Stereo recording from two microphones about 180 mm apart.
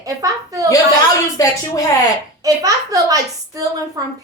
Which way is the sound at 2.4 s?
20° right (ahead or behind).